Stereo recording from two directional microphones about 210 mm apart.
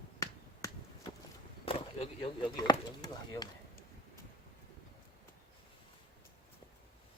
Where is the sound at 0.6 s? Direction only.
15° left (ahead or behind).